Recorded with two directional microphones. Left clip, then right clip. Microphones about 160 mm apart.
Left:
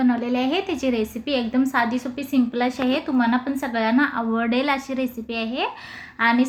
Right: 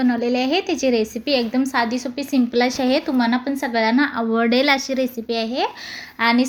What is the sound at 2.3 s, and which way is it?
A woman's voice, 35° right (ahead or behind).